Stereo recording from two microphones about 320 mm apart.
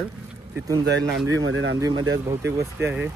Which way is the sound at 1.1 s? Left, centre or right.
Right.